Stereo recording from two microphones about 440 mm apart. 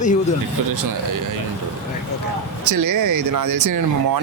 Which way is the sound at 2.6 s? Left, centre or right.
Right.